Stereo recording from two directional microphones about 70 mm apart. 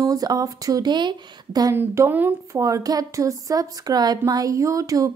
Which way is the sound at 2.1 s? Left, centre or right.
Right.